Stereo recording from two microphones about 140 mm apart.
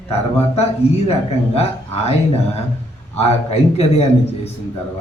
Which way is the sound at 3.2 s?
45° left (ahead or behind).